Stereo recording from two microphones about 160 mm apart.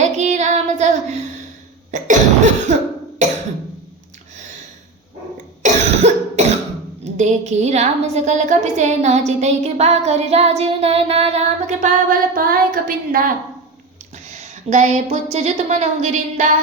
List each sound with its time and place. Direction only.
0.0 s child singing: 45° right (ahead or behind)
1.9 s cough: 50° right (ahead or behind)
5.6 s cough: 45° right (ahead or behind)
7.0 s a woman's voice: 45° right (ahead or behind)
12.3 s a sound: 65° right (ahead or behind)
14.3 s a woman's voice: 50° right (ahead or behind)